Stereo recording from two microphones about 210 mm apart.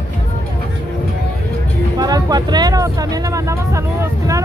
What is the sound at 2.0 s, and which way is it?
Music, 20° right (ahead or behind).